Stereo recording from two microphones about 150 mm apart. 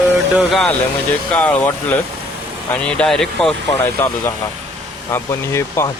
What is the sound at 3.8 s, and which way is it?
Speech, 15° left (ahead or behind).